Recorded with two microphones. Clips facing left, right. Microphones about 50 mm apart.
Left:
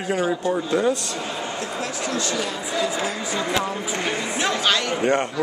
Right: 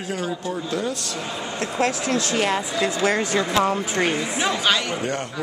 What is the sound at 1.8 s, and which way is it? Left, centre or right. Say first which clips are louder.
Speech: right 6 dB; right.